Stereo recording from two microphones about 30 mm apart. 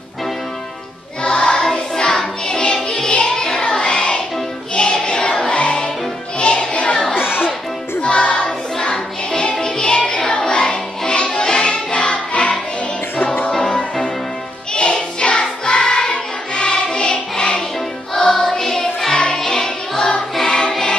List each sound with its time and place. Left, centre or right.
1.3 s music: left
3.3 s child singing: left
5.5 s music: left
8.0 s music: left
8.7 s music: left
14.7 s music: left
15.6 s choir: left
18.1 s music: centre; by 20.7 s left